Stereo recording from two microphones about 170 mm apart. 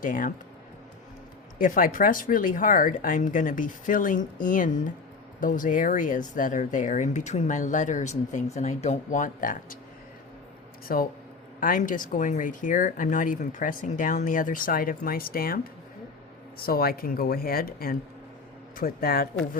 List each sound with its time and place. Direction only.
0.0 s speech: 50° left (ahead or behind)
1.5 s speech: 55° left (ahead or behind)
10.9 s speech: 55° left (ahead or behind)
16.6 s speech: 60° left (ahead or behind)